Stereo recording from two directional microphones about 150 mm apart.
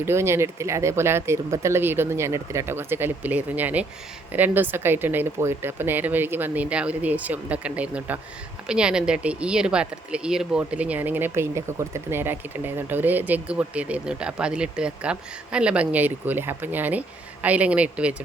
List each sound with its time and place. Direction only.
0.0 s speech: 15° right (ahead or behind)